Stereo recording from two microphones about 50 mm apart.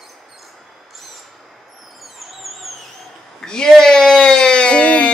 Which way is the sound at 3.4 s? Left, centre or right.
Centre.